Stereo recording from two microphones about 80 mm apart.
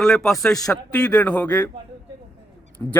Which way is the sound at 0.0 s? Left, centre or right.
Centre.